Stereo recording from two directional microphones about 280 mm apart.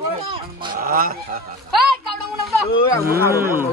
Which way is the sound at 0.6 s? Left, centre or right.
Right.